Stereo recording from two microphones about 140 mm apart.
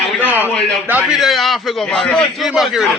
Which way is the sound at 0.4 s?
15° right (ahead or behind).